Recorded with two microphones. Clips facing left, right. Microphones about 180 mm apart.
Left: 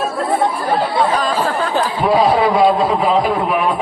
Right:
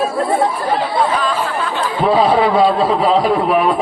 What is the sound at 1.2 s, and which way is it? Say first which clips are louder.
Chatter: left 1 dB; 40° left (ahead or behind).